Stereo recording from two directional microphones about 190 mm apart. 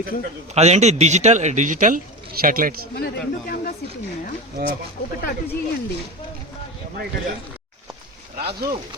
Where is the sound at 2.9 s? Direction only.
55° left (ahead or behind).